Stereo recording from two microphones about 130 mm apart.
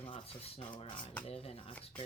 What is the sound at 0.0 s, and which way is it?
Speech, 45° left (ahead or behind).